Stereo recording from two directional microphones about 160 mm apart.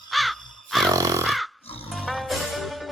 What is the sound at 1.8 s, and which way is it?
Music, centre (ahead or behind).